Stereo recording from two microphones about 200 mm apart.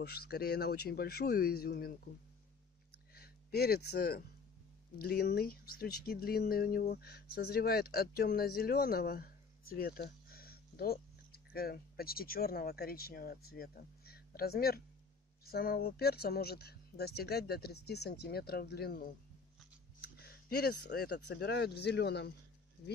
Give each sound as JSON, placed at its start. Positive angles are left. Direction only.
{"t": 0.0, "sound": "speech", "side_deg": 50}
{"t": 3.2, "sound": "speech", "side_deg": 50}